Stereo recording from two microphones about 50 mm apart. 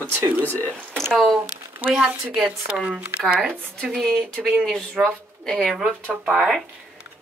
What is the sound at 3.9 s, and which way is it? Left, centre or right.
A woman's voice, centre.